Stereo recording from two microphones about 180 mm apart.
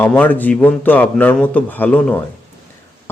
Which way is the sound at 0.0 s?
10° left (ahead or behind).